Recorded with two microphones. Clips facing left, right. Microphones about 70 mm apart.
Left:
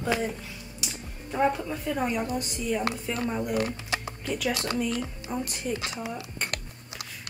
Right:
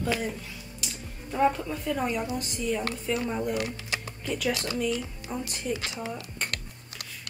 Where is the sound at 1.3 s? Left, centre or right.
Centre.